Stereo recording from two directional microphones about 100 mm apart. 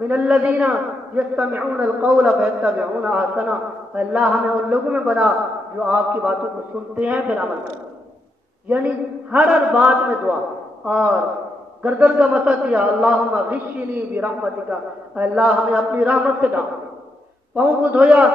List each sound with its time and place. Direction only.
0.1 s a man's voice: 15° right (ahead or behind)
8.6 s a man's voice: 15° right (ahead or behind)